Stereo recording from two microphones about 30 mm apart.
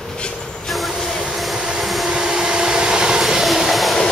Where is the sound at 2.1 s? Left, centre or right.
Right.